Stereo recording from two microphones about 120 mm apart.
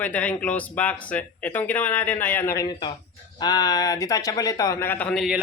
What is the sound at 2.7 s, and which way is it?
A man's voice, 40° left (ahead or behind).